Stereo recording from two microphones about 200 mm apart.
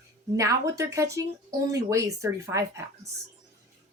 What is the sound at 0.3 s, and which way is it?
Speech, 15° right (ahead or behind).